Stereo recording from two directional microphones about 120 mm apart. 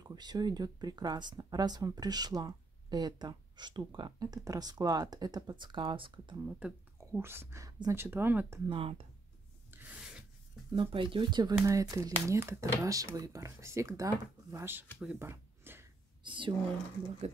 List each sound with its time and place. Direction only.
0.0 s speech: 35° right (ahead or behind)
6.6 s speech: 10° right (ahead or behind)
8.6 s speech: 50° right (ahead or behind)
9.7 s rub: 15° right (ahead or behind)
10.7 s speech: 45° right (ahead or behind)
11.5 s speech: 25° right (ahead or behind)
15.0 s a sound: 15° right (ahead or behind)
16.3 s speech: 45° right (ahead or behind)